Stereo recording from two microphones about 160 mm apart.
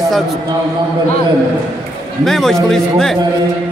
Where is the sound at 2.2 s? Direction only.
Centre (ahead or behind).